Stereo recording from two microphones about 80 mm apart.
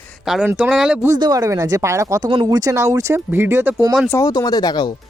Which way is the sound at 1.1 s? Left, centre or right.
Right.